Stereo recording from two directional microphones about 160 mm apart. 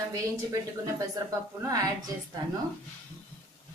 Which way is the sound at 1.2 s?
25° right (ahead or behind).